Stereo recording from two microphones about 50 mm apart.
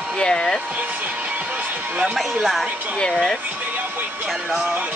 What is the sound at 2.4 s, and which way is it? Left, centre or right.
Speech, centre.